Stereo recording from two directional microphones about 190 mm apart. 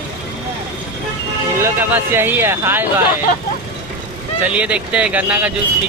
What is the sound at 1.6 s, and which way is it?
Speech, 10° right (ahead or behind).